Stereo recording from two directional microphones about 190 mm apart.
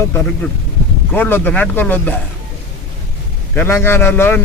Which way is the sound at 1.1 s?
10° left (ahead or behind).